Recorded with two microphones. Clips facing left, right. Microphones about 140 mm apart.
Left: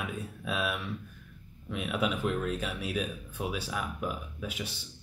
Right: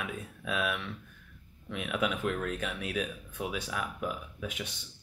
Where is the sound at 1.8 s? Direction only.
30° left (ahead or behind).